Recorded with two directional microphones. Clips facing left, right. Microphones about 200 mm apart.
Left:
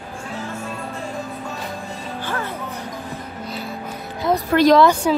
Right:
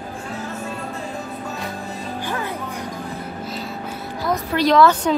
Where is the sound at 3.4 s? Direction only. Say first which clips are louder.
Even; centre (ahead or behind).